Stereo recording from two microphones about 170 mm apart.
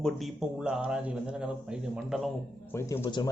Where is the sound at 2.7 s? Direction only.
15° left (ahead or behind).